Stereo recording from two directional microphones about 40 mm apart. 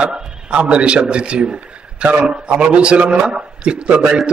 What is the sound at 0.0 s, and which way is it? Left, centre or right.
A man's voice, right.